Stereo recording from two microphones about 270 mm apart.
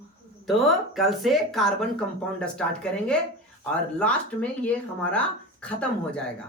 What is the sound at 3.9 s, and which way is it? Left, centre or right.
Speech, centre.